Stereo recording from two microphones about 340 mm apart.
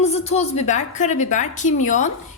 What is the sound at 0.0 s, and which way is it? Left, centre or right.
A woman's voice, centre.